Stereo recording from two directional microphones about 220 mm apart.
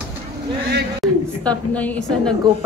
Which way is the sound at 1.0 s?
5° left (ahead or behind).